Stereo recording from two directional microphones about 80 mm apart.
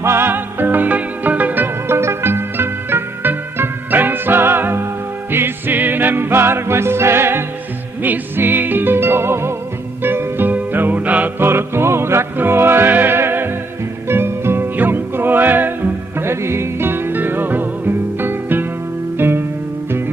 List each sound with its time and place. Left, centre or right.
0.0 s music: right